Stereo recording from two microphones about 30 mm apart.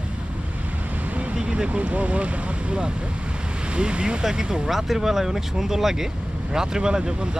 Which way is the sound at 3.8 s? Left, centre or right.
Right.